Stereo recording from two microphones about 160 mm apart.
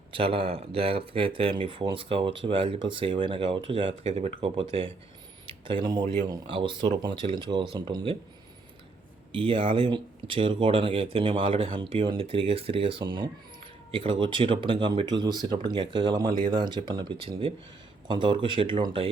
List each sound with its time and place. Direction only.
0.1 s speech: 35° right (ahead or behind)
9.3 s speech: 30° right (ahead or behind)